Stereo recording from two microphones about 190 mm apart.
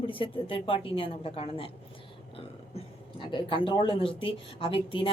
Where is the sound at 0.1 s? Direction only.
25° left (ahead or behind).